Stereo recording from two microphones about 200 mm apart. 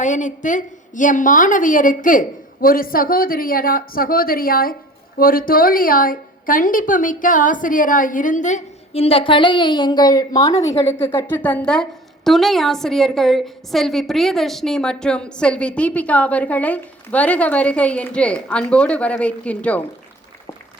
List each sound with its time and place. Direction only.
0.0 s a woman's voice: 40° left (ahead or behind); by 19.8 s 5° left (ahead or behind)